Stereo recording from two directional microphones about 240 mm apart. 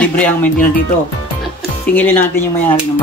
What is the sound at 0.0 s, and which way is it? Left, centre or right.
Speech, centre.